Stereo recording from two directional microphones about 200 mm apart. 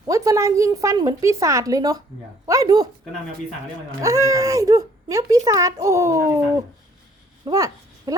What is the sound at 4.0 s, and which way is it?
A woman's voice, 15° right (ahead or behind).